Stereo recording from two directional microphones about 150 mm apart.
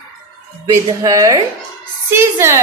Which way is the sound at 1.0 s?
25° right (ahead or behind).